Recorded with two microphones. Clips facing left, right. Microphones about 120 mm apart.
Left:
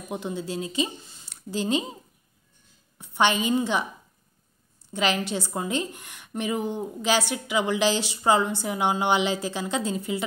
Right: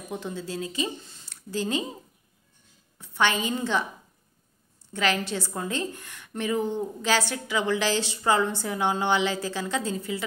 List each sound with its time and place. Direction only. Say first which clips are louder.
0.1 s a woman's voice: left 3 dB; 15° left (ahead or behind)
3.0 s a woman's voice: left 2 dB; 20° left (ahead or behind)
4.9 s a woman's voice: left 1 dB; 20° left (ahead or behind)